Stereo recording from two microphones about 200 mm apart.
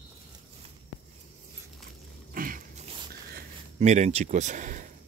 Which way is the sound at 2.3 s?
45° right (ahead or behind).